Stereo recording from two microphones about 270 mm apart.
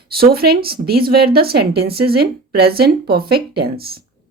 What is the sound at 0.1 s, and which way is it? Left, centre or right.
Speech, right.